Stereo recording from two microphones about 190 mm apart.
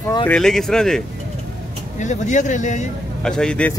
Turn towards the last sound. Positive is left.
turn(degrees=5)  # may be behind; listen again after turning